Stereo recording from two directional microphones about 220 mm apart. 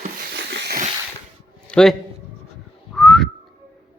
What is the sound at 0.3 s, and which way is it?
Wheeze, 50° right (ahead or behind).